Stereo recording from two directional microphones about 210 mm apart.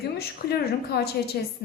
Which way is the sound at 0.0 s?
50° left (ahead or behind).